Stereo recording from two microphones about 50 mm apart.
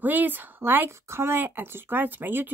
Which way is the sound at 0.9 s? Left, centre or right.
Right.